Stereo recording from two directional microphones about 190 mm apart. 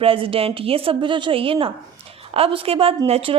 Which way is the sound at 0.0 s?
30° right (ahead or behind).